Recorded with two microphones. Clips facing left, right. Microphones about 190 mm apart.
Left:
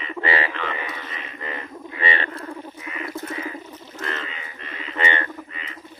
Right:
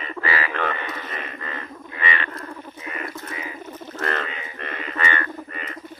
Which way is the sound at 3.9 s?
60° right (ahead or behind).